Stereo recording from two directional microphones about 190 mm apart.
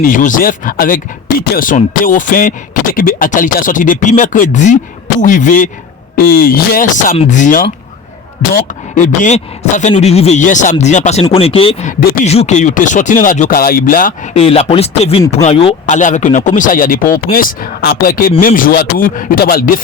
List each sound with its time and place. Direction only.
0.1 s speech: 45° left (ahead or behind)
9.0 s speech: 40° left (ahead or behind)
14.4 s speech: 30° left (ahead or behind); by 19.8 s 45° left (ahead or behind)